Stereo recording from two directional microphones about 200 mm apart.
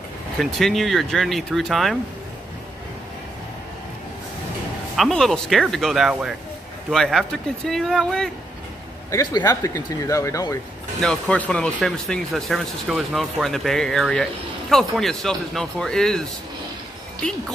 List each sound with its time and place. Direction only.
0.4 s speech: centre (ahead or behind)
4.9 s speech: centre (ahead or behind)
9.1 s speech: 20° left (ahead or behind)
11.0 s speech: 5° left (ahead or behind)